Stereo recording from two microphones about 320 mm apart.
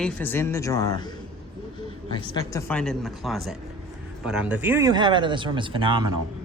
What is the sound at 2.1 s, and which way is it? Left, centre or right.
A woman's voice, centre.